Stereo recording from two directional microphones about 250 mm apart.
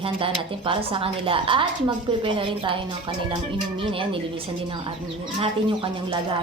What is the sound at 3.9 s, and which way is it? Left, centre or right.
Speech, right.